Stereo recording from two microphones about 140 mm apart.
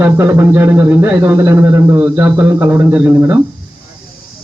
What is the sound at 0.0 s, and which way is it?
A man's voice, 15° right (ahead or behind).